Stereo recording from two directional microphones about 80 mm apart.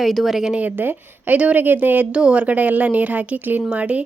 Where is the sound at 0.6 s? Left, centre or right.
Right.